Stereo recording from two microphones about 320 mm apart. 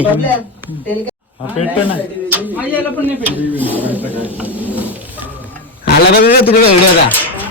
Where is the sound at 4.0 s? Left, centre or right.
Centre.